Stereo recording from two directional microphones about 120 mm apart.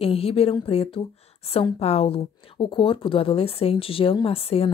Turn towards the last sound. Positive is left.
turn(degrees=55)  # may be behind; listen again after turning